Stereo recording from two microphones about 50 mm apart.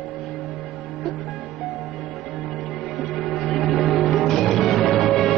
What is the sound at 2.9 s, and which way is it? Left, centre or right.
Music, centre.